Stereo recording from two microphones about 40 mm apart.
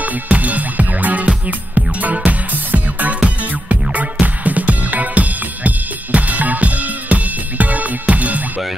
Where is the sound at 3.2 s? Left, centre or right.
Right.